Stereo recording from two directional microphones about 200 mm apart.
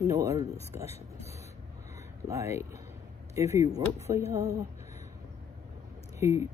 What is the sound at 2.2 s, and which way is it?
Speech, 15° right (ahead or behind).